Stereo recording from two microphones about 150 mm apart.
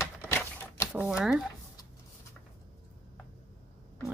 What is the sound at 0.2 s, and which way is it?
Typewriter, 15° left (ahead or behind).